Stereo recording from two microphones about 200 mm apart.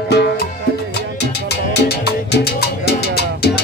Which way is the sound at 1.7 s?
55° left (ahead or behind).